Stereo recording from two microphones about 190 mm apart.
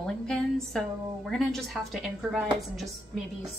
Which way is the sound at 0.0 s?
5° left (ahead or behind).